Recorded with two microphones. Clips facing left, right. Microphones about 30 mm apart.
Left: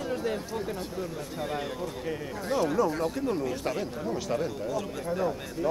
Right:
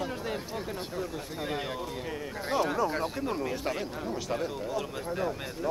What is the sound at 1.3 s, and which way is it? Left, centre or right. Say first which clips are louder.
A man's voice: left 1 dB; centre.